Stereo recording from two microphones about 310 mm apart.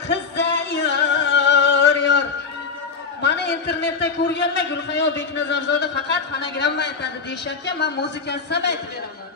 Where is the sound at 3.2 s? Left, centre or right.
Left.